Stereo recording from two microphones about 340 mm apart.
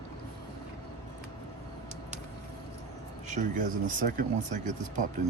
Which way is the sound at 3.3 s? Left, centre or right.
Right.